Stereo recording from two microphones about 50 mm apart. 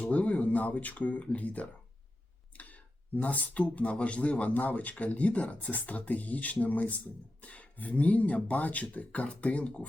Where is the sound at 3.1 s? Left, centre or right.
Left.